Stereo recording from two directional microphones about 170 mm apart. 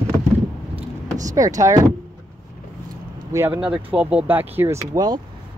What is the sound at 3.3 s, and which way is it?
Speech, 15° right (ahead or behind).